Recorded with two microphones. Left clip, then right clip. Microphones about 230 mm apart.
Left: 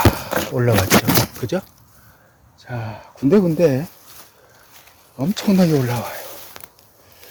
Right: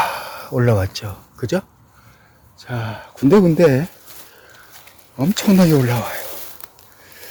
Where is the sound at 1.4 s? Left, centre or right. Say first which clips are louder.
Right 2 dB; centre; by 3.9 s right.